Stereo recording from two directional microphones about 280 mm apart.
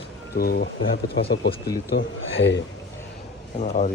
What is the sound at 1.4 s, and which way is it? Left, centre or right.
Speech, centre.